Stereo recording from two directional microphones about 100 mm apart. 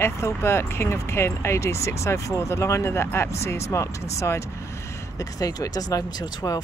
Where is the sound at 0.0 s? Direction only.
25° left (ahead or behind).